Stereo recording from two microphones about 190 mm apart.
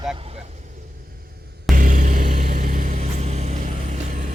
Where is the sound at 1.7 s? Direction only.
45° right (ahead or behind).